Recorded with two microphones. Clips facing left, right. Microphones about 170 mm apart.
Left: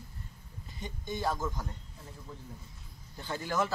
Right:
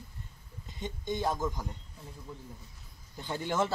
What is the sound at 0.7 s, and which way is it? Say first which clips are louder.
Speech: right 3 dB; 20° right (ahead or behind).